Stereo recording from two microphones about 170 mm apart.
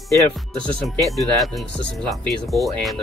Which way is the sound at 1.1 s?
Centre (ahead or behind).